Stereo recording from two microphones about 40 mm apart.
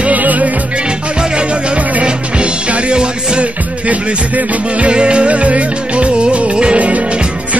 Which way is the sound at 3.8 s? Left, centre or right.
Right.